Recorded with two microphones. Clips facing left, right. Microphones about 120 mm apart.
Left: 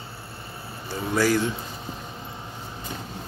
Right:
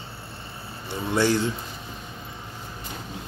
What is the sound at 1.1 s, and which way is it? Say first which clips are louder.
Speech: even; 25° right (ahead or behind).